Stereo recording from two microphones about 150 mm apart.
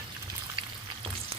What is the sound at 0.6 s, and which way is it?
Frying, 35° right (ahead or behind).